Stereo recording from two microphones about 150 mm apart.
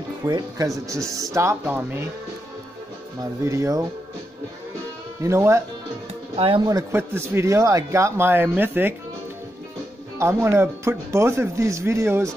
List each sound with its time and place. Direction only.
0.2 s a man's voice: 25° right (ahead or behind)
3.4 s speech: 20° right (ahead or behind)
5.2 s speech: 20° right (ahead or behind)
6.3 s speech: 35° right (ahead or behind)
6.7 s a man's voice: 15° right (ahead or behind)
10.1 s speech: 20° right (ahead or behind)